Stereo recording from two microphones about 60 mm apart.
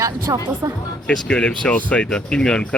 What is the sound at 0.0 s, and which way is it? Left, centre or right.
Speech, right.